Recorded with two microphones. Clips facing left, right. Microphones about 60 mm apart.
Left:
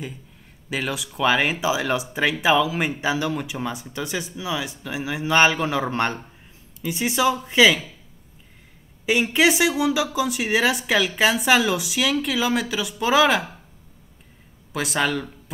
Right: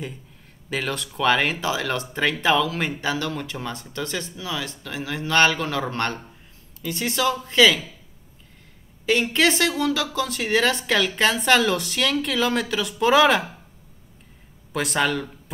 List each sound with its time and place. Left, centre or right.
0.7 s speech: centre
9.0 s speech: centre
14.7 s speech: centre